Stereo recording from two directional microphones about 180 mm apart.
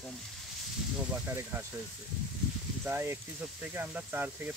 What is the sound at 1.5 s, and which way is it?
Speech, 15° right (ahead or behind).